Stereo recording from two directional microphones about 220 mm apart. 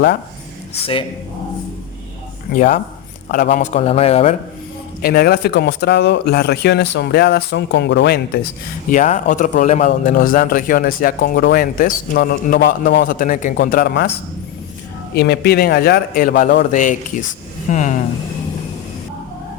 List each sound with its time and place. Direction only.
0.7 s a man's voice: 25° left (ahead or behind)
2.5 s a man's voice: 35° left (ahead or behind)
5.0 s speech: 45° left (ahead or behind)
8.9 s a man's voice: 35° left (ahead or behind)
15.1 s a man's voice: 45° left (ahead or behind)